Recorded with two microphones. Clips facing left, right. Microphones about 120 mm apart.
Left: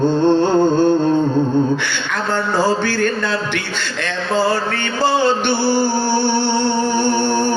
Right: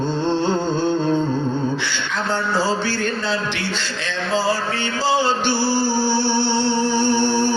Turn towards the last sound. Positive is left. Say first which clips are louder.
# left 1 dB
turn(degrees=50)  # may be behind; listen again after turning